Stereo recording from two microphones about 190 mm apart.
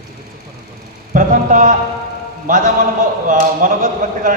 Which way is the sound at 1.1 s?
45° right (ahead or behind).